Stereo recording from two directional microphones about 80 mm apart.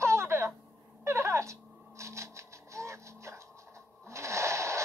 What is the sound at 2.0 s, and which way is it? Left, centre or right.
Music, right.